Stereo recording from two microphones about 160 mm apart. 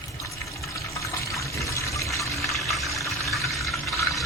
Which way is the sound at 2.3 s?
Centre (ahead or behind).